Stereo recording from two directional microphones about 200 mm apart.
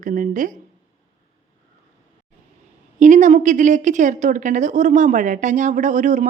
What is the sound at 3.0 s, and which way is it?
A woman's voice, 40° right (ahead or behind).